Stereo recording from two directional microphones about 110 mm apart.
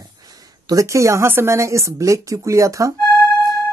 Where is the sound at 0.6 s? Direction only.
30° right (ahead or behind).